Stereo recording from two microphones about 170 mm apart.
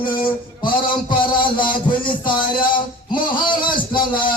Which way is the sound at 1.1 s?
30° left (ahead or behind).